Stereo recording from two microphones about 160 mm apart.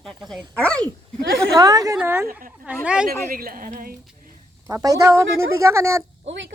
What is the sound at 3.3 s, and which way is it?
Speech, 65° right (ahead or behind).